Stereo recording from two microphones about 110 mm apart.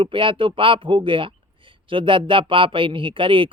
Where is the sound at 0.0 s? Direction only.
50° right (ahead or behind).